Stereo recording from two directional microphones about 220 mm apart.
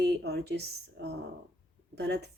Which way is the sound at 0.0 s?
50° right (ahead or behind).